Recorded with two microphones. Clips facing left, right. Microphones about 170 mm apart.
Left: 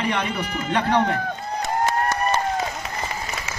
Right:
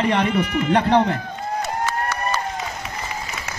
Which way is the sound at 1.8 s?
50° left (ahead or behind).